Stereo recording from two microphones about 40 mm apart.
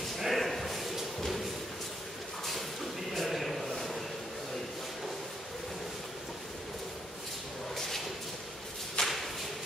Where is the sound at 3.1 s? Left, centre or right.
Centre.